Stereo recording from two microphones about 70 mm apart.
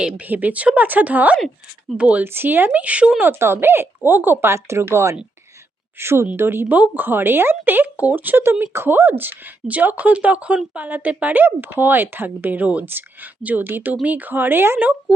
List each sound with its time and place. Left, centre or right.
0.3 s speech: right
2.2 s speech: right
6.7 s speech: right